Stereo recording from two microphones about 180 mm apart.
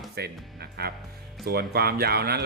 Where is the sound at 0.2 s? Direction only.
60° right (ahead or behind).